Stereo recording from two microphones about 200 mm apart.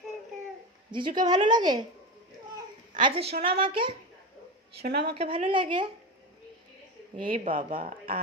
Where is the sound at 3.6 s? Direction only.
25° right (ahead or behind).